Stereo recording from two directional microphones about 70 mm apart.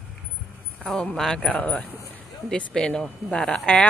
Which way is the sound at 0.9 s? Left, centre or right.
Centre.